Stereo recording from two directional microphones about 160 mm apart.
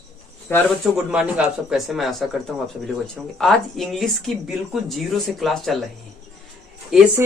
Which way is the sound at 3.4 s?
Centre (ahead or behind).